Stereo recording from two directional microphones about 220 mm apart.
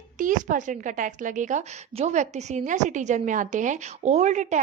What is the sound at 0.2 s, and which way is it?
A woman's voice, 35° right (ahead or behind).